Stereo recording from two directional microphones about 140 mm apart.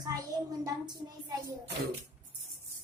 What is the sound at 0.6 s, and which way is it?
Speech, 25° right (ahead or behind).